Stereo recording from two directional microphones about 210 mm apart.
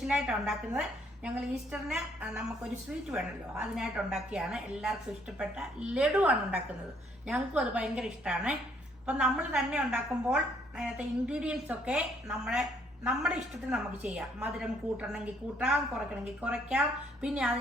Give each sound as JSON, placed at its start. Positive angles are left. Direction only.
{"t": 0.1, "sound": "a woman's voice", "side_deg": -5}